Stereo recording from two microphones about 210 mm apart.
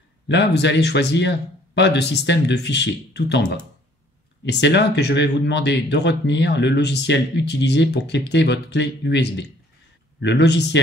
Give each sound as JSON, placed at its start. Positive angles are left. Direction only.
{"t": 0.3, "sound": "speech", "side_deg": 55}
{"t": 4.5, "sound": "speech", "side_deg": 55}